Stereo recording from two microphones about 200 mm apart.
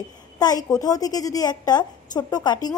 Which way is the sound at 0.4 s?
20° left (ahead or behind).